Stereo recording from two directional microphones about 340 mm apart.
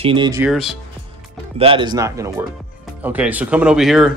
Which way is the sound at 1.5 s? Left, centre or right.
Centre.